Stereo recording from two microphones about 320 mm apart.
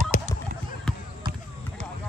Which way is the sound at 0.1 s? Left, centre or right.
Left.